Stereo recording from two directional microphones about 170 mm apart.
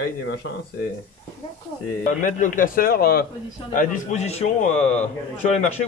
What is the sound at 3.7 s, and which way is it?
A man's voice, 50° left (ahead or behind).